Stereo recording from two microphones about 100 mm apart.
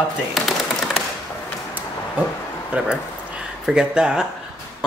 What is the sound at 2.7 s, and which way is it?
A man's voice, 10° right (ahead or behind).